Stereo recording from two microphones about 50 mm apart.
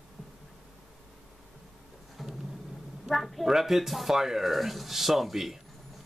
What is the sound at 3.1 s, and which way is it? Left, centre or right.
Speech, centre.